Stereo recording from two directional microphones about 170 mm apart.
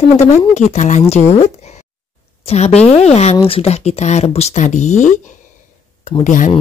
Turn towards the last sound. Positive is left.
turn(degrees=50)  # may be behind; listen again after turning